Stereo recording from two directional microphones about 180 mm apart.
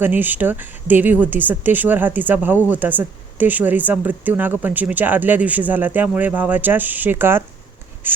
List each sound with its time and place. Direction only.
0.0 s speech: 10° right (ahead or behind)